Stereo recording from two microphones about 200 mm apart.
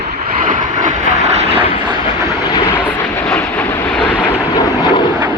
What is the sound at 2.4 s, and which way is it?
Vehicle, 20° left (ahead or behind).